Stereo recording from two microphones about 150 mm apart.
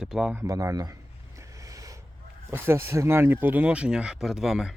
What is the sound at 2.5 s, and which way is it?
Speech, 15° right (ahead or behind).